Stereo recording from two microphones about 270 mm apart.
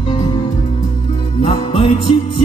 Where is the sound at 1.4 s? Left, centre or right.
Centre.